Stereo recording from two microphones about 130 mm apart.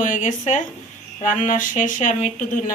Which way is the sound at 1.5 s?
90° left.